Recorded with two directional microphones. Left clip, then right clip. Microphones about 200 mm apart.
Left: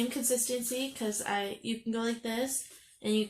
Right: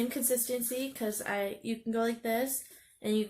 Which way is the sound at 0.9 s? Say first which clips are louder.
Even; 20° left (ahead or behind).